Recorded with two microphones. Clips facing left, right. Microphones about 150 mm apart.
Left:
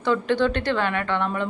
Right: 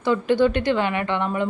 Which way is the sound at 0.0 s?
10° right (ahead or behind).